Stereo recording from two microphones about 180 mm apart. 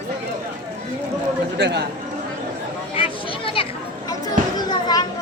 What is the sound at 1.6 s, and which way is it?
Speech, 70° right (ahead or behind).